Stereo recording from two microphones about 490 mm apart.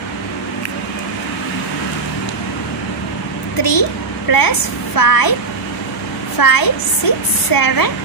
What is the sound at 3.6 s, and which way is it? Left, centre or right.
A child's voice, left.